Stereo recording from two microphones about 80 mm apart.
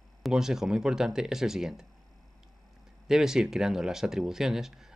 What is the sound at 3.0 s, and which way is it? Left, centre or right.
Speech, centre.